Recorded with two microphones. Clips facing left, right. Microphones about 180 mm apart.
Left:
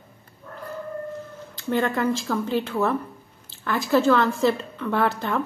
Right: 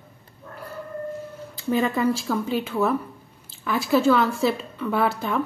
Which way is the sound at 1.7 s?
10° right (ahead or behind).